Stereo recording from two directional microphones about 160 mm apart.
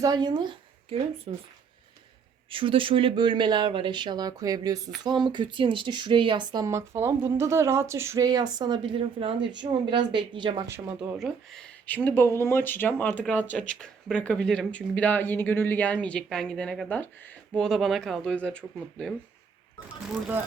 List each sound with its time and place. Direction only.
0.0 s speech: 25° right (ahead or behind)
2.5 s speech: 35° right (ahead or behind)
10.7 s speech: 15° right (ahead or behind)
11.2 s speech: 5° left (ahead or behind)
12.0 s speech: 15° left (ahead or behind)